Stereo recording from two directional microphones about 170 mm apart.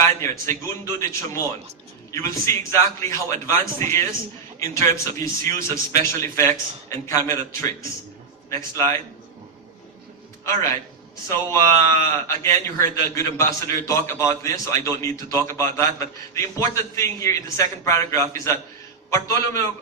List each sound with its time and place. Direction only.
0.0 s a man's voice: 15° left (ahead or behind)
10.4 s a man's voice: 15° left (ahead or behind)